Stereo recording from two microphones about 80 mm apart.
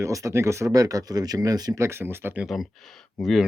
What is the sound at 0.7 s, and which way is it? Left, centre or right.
Speech, right.